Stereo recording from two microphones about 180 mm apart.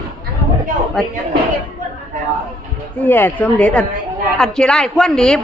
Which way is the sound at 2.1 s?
45° right (ahead or behind).